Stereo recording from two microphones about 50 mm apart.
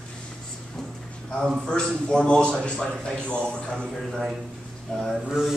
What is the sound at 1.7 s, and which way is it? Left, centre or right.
A man's voice, centre.